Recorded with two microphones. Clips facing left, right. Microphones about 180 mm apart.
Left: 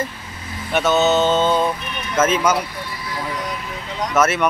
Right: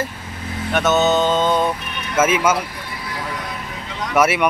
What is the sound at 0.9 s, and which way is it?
Speech, 15° right (ahead or behind).